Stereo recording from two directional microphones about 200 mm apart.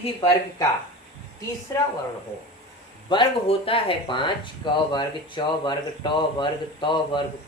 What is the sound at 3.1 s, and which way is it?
A man's voice, 25° left (ahead or behind).